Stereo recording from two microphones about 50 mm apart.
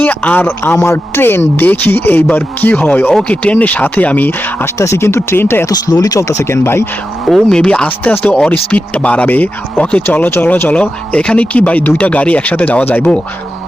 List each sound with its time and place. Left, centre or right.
0.1 s speech: left
0.6 s speech: left
4.6 s speech: left
6.1 s speech: left
7.5 s speech: centre
7.9 s speech: left
8.2 s speech: centre
10.2 s speech: left
12.8 s speech: left